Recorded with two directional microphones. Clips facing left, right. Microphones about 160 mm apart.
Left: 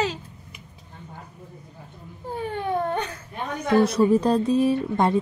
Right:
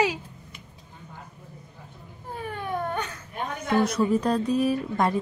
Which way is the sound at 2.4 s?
25° left (ahead or behind).